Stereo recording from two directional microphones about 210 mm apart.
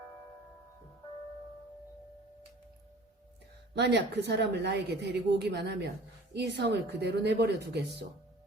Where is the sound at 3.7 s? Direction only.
55° right (ahead or behind).